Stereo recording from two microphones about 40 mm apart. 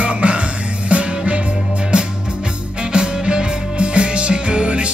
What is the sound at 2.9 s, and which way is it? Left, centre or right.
Music, right.